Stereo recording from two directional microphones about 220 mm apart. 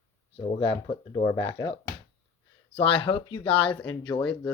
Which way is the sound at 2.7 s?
25° left (ahead or behind).